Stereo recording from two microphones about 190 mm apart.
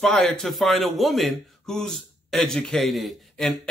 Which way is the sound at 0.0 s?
5° left (ahead or behind).